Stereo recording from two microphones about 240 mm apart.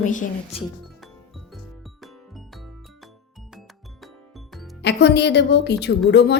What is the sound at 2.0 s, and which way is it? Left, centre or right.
Music, centre.